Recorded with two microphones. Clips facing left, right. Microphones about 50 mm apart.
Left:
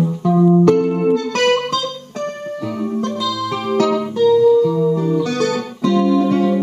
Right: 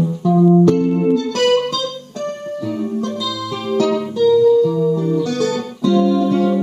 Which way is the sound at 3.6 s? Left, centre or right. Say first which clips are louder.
Even; left.